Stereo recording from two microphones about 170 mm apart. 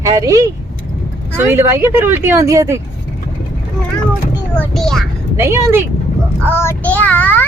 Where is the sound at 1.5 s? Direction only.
15° right (ahead or behind).